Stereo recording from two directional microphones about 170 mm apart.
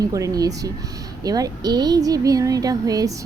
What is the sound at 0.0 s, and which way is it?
A woman's voice, 20° right (ahead or behind).